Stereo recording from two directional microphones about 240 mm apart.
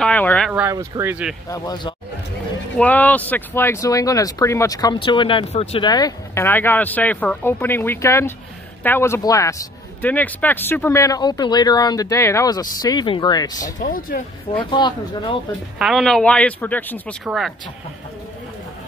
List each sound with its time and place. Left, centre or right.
0.0 s speech: centre
0.5 s speech: centre
1.5 s speech: centre
2.8 s speech: centre
13.7 s speech: left
14.6 s speech: centre
15.8 s speech: centre